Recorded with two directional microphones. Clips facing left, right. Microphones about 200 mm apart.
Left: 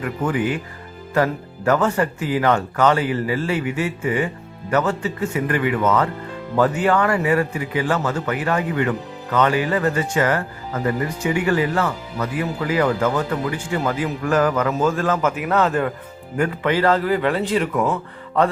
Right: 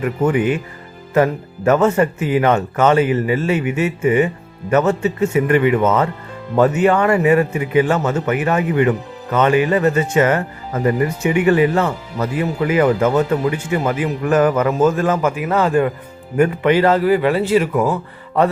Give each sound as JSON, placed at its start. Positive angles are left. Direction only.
{"t": 0.0, "sound": "a man's voice", "side_deg": -25}